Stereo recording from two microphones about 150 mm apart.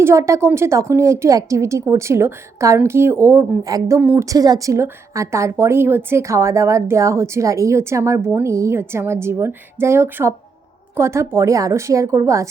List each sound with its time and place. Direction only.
0.0 s a woman's voice: 20° right (ahead or behind)